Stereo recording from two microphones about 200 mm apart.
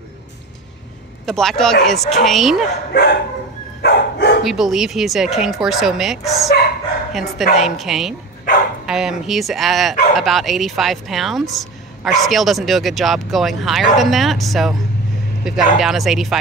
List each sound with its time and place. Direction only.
1.2 s speech: centre (ahead or behind)
2.9 s speech: 55° left (ahead or behind)
3.8 s dog: 60° left (ahead or behind)
4.4 s speech: centre (ahead or behind)